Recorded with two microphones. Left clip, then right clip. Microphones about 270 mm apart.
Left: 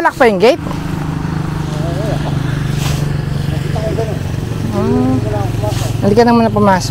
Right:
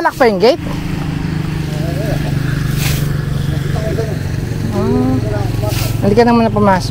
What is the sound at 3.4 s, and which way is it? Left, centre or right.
Vehicle, right.